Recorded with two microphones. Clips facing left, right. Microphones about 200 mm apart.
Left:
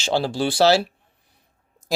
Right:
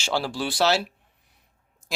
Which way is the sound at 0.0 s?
25° left (ahead or behind).